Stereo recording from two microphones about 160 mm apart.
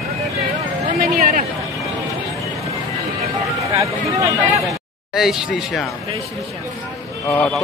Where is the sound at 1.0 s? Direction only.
55° right (ahead or behind).